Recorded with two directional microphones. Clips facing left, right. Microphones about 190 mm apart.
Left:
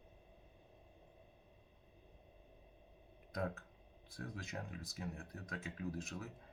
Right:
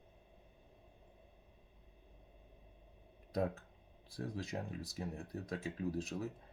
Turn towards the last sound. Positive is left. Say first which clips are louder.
# right 5 dB
turn(degrees=-30)  # may be behind; listen again after turning